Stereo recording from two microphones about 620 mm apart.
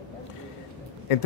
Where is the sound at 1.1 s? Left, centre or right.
Left.